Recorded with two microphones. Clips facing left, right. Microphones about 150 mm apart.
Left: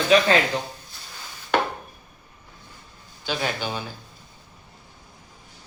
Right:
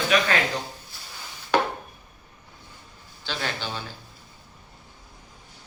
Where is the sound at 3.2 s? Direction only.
15° left (ahead or behind).